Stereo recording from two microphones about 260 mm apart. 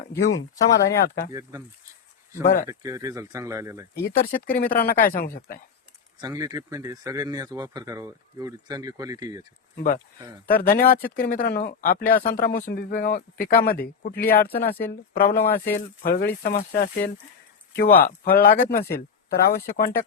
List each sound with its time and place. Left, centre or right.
0.7 s speech: left
1.3 s speech: centre
2.4 s speech: left
2.6 s speech: centre
4.1 s speech: left
6.1 s speech: centre
9.7 s speech: left
10.2 s speech: centre
10.6 s speech: left
15.3 s speech: centre
16.0 s speech: left